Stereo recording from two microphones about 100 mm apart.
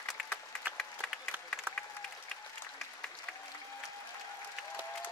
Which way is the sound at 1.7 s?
15° right (ahead or behind).